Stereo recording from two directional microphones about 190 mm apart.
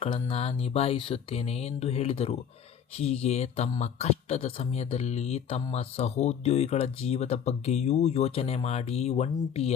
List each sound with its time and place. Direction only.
0.0 s speech: 30° left (ahead or behind)